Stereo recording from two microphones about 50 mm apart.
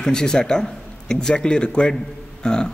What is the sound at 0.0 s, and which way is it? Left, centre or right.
A man's voice, centre.